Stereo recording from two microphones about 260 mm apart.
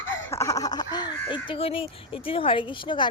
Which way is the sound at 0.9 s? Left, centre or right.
Centre.